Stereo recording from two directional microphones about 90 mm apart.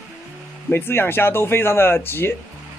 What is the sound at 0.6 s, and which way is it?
Speech, 25° left (ahead or behind).